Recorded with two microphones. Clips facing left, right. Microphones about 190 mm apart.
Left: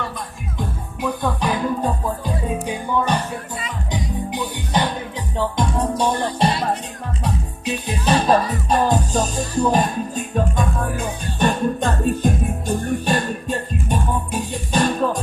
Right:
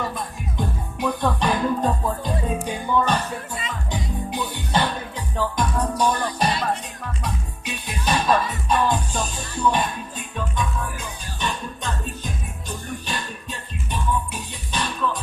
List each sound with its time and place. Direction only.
1.0 s music: 5° left (ahead or behind); by 15.2 s 45° left (ahead or behind)